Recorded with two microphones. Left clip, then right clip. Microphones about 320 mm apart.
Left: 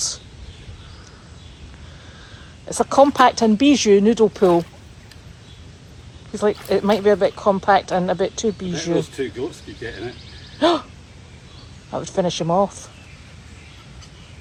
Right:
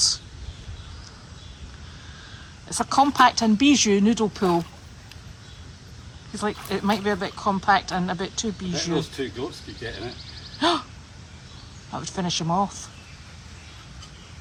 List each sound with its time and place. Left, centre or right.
2.6 s speech: centre
6.3 s speech: centre
8.7 s speech: right
10.6 s speech: centre
11.9 s speech: centre